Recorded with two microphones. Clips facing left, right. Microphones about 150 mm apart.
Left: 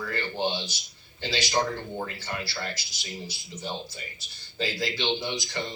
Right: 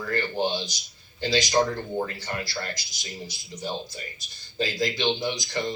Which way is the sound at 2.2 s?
15° right (ahead or behind).